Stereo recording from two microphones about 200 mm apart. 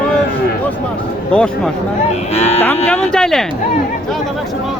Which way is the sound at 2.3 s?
30° left (ahead or behind).